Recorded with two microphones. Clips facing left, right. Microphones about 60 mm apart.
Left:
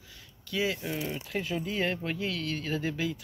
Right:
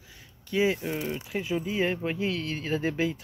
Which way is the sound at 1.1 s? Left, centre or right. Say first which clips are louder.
Right 3 dB; centre.